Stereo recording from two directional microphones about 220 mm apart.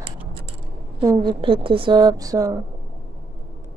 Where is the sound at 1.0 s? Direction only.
20° right (ahead or behind).